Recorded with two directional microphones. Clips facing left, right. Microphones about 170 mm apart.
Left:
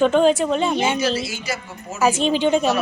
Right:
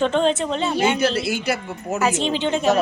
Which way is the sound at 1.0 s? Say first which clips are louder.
Right 2 dB; 60° right (ahead or behind).